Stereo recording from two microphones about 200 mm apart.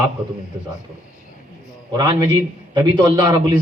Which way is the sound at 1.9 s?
20° right (ahead or behind).